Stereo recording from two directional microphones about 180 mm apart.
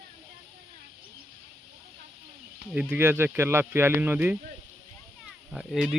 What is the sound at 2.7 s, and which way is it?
Speech, 10° right (ahead or behind).